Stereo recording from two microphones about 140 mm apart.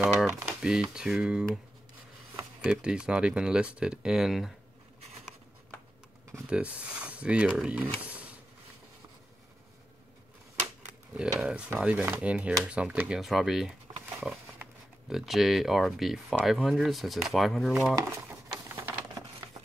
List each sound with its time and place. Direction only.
0.6 s speech: 5° right (ahead or behind)
2.6 s speech: 5° right (ahead or behind)
6.5 s speech: 10° right (ahead or behind)
8.0 s a sound: 10° right (ahead or behind)
11.1 s speech: 5° right (ahead or behind)
15.0 s speech: centre (ahead or behind)
18.5 s a sound: 20° right (ahead or behind)